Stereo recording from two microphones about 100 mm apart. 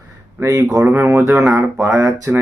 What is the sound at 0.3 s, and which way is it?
Speech, 30° right (ahead or behind).